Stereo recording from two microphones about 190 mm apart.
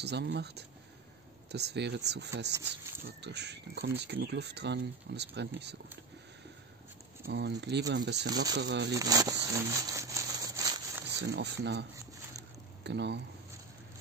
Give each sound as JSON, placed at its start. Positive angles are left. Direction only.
{"t": 0.0, "sound": "speech", "side_deg": -60}
{"t": 7.2, "sound": "speech", "side_deg": -60}
{"t": 8.9, "sound": "a sound", "side_deg": -20}
{"t": 11.1, "sound": "speech", "side_deg": -65}
{"t": 12.8, "sound": "speech", "side_deg": -65}